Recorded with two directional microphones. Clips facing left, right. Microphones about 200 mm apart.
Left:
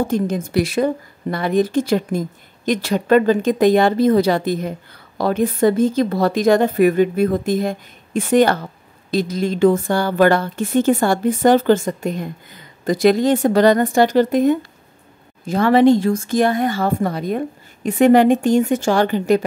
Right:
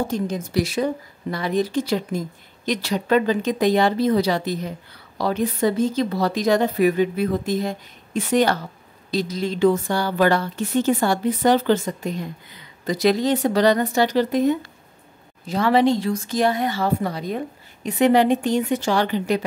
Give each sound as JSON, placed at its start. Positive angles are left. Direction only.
{"t": 0.1, "sound": "speech", "side_deg": 55}